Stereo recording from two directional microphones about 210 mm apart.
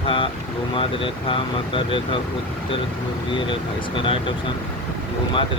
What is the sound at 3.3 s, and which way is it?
Speech, 25° left (ahead or behind).